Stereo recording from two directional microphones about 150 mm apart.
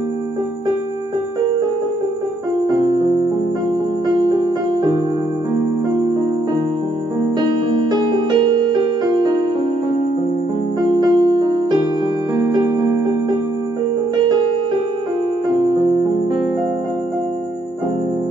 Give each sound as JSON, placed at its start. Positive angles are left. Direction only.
{"t": 2.7, "sound": "keyboard", "side_deg": -30}
{"t": 7.9, "sound": "music", "side_deg": -30}
{"t": 11.0, "sound": "music", "side_deg": -30}